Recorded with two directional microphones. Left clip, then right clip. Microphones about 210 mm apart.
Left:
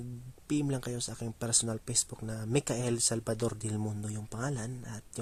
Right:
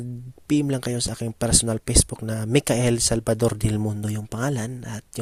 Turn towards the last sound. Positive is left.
turn(degrees=-40)  # may be behind; listen again after turning